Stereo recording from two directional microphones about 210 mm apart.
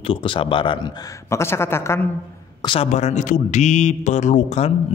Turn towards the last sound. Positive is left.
turn(degrees=35)  # may be behind; listen again after turning